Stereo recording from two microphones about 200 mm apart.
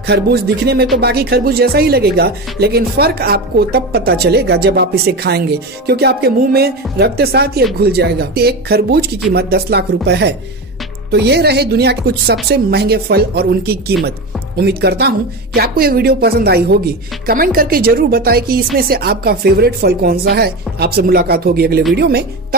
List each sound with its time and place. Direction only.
0.0 s speech: 50° right (ahead or behind)